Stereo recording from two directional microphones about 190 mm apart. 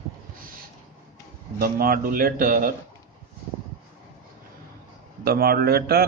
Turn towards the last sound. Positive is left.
turn(degrees=-55)  # may be behind; listen again after turning